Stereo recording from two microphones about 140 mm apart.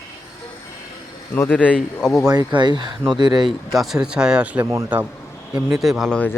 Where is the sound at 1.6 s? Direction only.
5° left (ahead or behind).